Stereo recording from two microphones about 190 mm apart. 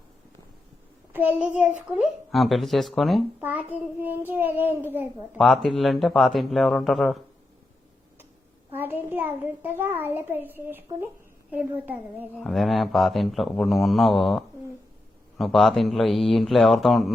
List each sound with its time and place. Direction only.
1.1 s a child's voice: 10° right (ahead or behind)
5.4 s speech: centre (ahead or behind)
8.7 s a child's voice: 10° right (ahead or behind)